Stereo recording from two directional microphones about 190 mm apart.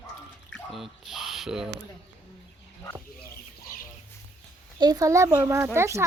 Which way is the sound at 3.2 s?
50° left (ahead or behind).